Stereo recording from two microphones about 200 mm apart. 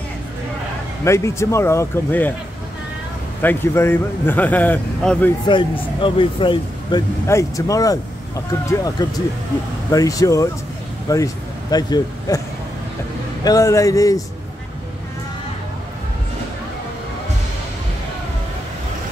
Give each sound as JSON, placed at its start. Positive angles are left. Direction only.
{"t": 1.0, "sound": "speech", "side_deg": 15}
{"t": 3.4, "sound": "speech", "side_deg": 10}
{"t": 5.5, "sound": "speech", "side_deg": 25}
{"t": 13.4, "sound": "speech", "side_deg": 20}